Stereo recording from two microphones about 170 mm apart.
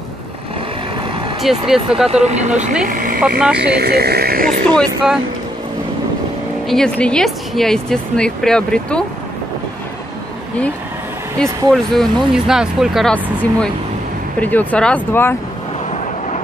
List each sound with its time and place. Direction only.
1.4 s speech: centre (ahead or behind)
2.2 s speech: 40° right (ahead or behind)
2.9 s a sound: 55° right (ahead or behind)
3.2 s speech: 5° right (ahead or behind)
3.5 s speech: 75° right (ahead or behind)
4.7 s speech: centre (ahead or behind)
6.7 s speech: 5° left (ahead or behind)
11.3 s speech: centre (ahead or behind)